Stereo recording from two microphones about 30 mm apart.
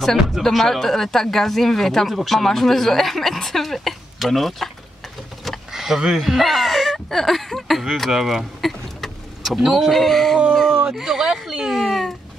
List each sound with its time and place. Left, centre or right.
0.0 s speech: centre
5.7 s a sound: centre
6.1 s speech: centre
8.1 s speech: centre
8.5 s vehicle: centre
9.6 s speech: centre
9.8 s speech: centre
10.5 s a sound: centre
10.9 s speech: centre
11.7 s speech: centre